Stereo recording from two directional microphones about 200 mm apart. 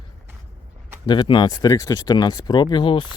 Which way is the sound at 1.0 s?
20° left (ahead or behind).